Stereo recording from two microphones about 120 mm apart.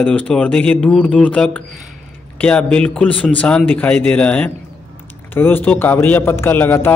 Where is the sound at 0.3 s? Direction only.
10° left (ahead or behind).